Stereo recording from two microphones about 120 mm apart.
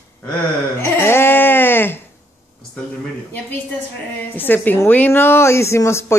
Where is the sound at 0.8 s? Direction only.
20° left (ahead or behind).